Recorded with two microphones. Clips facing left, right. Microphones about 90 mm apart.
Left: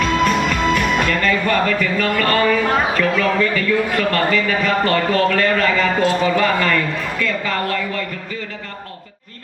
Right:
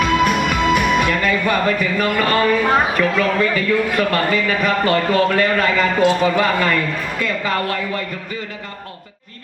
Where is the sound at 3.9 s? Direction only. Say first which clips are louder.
Even; 15° right (ahead or behind).